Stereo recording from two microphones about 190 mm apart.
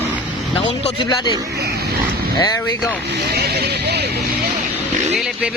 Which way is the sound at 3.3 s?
55° right (ahead or behind).